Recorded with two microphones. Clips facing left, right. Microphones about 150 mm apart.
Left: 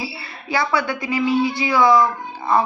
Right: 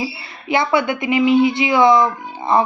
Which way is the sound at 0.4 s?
20° right (ahead or behind).